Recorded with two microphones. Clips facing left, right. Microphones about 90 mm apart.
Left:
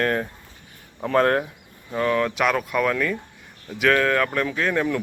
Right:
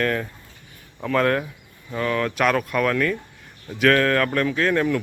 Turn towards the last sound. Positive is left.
turn(degrees=15)  # may be behind; listen again after turning